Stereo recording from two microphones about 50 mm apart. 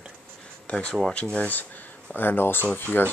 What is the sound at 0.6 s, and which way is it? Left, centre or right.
Speech, left.